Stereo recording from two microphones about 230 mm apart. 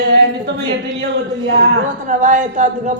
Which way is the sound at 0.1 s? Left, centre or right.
Right.